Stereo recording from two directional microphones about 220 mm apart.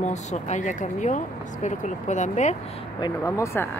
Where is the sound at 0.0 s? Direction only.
30° left (ahead or behind).